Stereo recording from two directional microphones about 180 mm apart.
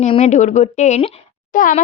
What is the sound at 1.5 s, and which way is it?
Speech, 50° left (ahead or behind).